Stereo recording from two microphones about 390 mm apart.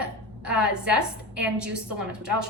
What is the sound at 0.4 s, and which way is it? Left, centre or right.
A woman's voice, centre.